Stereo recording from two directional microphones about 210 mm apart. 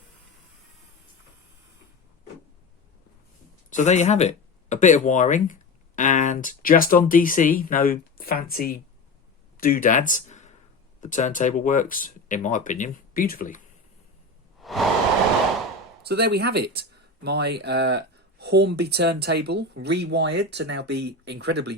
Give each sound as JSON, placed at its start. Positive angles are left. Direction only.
{"t": 3.7, "sound": "speech", "side_deg": 35}
{"t": 14.6, "sound": "a sound", "side_deg": 0}
{"t": 16.0, "sound": "speech", "side_deg": -50}